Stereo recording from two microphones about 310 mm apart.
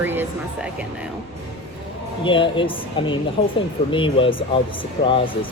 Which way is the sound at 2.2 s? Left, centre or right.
Centre.